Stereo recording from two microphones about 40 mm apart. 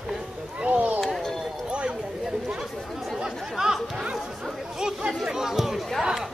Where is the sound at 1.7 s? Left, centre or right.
Right.